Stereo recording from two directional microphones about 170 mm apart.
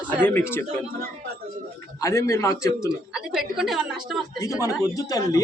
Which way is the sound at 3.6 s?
Centre (ahead or behind).